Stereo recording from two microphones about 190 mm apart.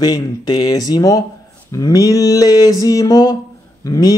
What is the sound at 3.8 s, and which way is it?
Speech, 15° left (ahead or behind).